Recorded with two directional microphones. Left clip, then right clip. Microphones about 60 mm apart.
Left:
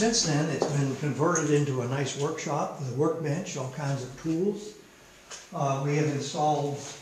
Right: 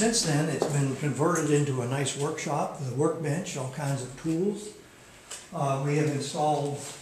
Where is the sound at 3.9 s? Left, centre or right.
Centre.